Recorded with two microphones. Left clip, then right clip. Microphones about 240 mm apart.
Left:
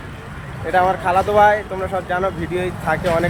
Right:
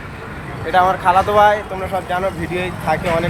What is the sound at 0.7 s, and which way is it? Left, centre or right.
Speech, centre.